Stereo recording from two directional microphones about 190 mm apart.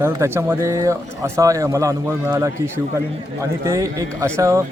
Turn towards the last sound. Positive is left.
turn(degrees=-15)  # may be behind; listen again after turning